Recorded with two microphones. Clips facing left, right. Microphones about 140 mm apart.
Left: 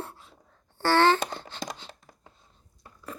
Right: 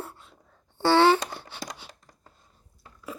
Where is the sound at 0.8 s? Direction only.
15° right (ahead or behind).